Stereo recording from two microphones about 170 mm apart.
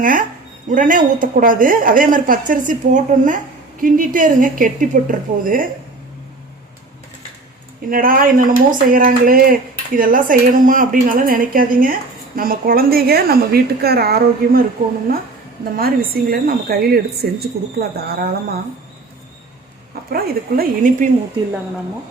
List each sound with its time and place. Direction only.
0.0 s a woman's voice: 55° right (ahead or behind)
7.9 s speech: 55° right (ahead or behind)
15.8 s speech: 60° right (ahead or behind)
20.1 s speech: 55° right (ahead or behind)